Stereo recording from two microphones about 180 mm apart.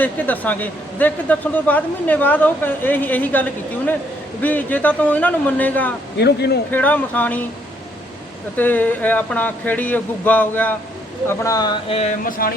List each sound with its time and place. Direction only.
0.0 s a man's voice: 10° left (ahead or behind)
6.1 s a man's voice: 65° left (ahead or behind)
6.7 s a man's voice: 10° left (ahead or behind)
8.5 s a man's voice: 10° left (ahead or behind)
11.9 s speech: 35° left (ahead or behind)
12.2 s a sound: 55° left (ahead or behind)